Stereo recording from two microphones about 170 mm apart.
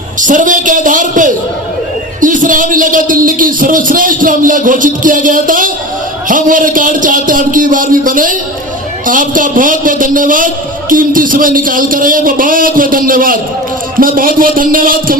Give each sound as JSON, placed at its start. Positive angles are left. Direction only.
{"t": 0.2, "sound": "a man's voice", "side_deg": -50}